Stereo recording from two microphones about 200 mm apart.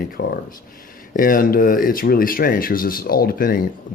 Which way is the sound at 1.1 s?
45° left (ahead or behind).